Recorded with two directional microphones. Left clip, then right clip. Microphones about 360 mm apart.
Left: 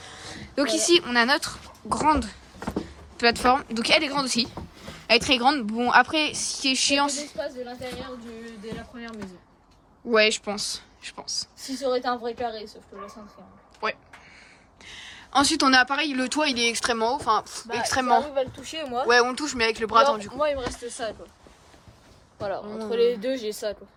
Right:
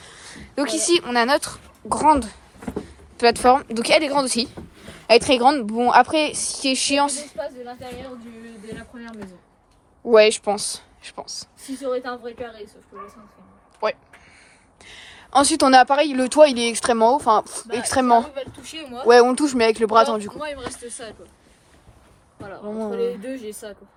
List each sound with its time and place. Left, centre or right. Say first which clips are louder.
0.0 s speech: left 1 dB; centre
8.6 s a sound: right 1 dB; centre
10.1 s speech: right 7 dB; centre
11.9 s speech: left 1 dB; left
13.8 s speech: right 5 dB; centre
18.3 s speech: left 4 dB; left
19.0 s speech: right 8 dB; centre
20.3 s speech: left 5 dB; left
20.7 s speech: even; centre
22.6 s speech: right 6 dB; centre